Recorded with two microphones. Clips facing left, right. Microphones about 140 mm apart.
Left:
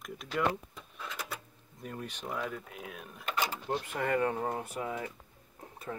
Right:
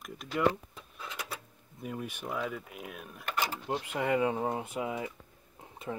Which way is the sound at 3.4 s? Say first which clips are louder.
Even; 15° right (ahead or behind).